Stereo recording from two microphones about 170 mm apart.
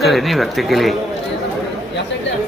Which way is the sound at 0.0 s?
Centre (ahead or behind).